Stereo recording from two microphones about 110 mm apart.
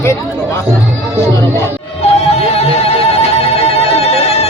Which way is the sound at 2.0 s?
65° left (ahead or behind).